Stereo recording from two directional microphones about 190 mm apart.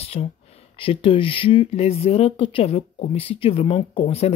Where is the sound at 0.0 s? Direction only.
30° left (ahead or behind).